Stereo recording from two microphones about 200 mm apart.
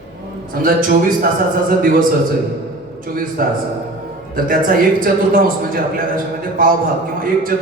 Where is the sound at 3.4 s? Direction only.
45° right (ahead or behind).